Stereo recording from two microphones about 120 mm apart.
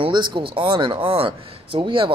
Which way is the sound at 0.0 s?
40° right (ahead or behind).